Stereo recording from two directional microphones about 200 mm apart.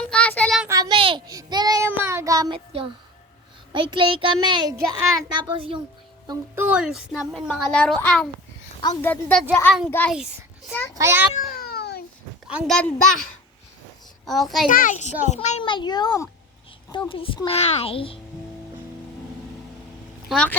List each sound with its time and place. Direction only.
0.0 s child singing: 5° left (ahead or behind)
0.7 s child singing: 20° right (ahead or behind)
3.7 s a child's voice: 25° right (ahead or behind)
6.2 s a woman's voice: 10° right (ahead or behind)
10.9 s a child's voice: 10° right (ahead or behind)
11.5 s cat: 50° left (ahead or behind)
12.5 s speech: 5° right (ahead or behind)
14.3 s a woman's voice: centre (ahead or behind)
14.7 s a child's voice: 40° left (ahead or behind)
20.2 s a woman's voice: 5° left (ahead or behind)